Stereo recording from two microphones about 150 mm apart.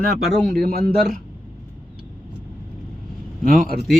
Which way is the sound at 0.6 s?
80° right.